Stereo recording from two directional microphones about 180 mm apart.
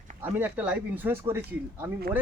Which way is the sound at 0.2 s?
10° right (ahead or behind).